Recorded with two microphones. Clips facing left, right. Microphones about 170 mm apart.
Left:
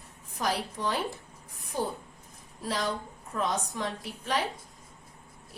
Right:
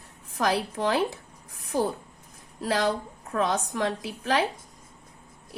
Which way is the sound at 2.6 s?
80° right.